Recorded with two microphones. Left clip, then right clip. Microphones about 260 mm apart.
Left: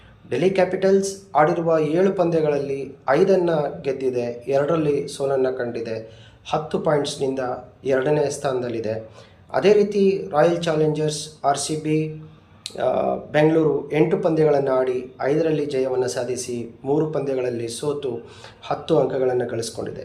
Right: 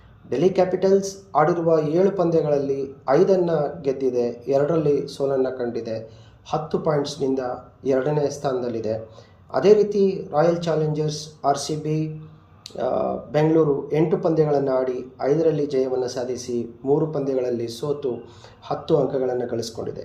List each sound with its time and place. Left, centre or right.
0.3 s speech: centre
0.9 s speech: centre
1.3 s speech: centre